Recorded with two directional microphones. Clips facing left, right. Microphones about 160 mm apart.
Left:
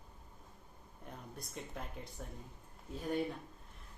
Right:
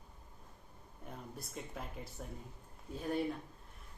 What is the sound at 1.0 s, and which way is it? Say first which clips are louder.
Speech: right 1 dB; centre (ahead or behind).